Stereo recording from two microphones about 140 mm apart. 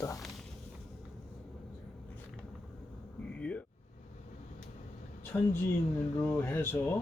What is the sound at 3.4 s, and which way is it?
Vehicle, 10° left (ahead or behind).